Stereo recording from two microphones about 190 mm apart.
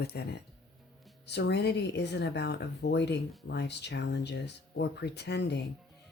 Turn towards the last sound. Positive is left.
turn(degrees=65)  # may be behind; listen again after turning